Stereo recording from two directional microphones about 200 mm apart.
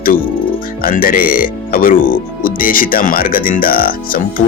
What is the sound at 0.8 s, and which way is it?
Speech, 45° left (ahead or behind).